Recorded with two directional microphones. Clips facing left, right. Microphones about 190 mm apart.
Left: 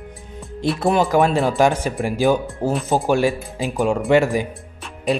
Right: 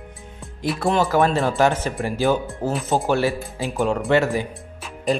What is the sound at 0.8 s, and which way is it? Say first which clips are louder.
Speech: left 2 dB; 15° left (ahead or behind).